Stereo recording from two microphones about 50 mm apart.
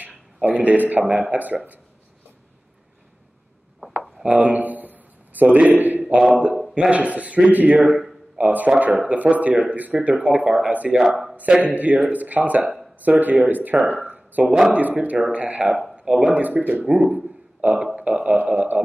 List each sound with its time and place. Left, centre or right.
0.4 s speech: right
4.2 s a sound: right
6.7 s speech: right
9.9 s speech: centre
10.7 s speech: right
11.0 s speech: centre
11.6 s speech: right
15.7 s a sound: centre
16.0 s speech: right
16.8 s speech: centre
17.1 s speech: right